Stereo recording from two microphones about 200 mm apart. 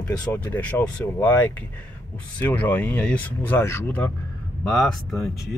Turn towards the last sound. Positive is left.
turn(degrees=0)  # may be behind; listen again after turning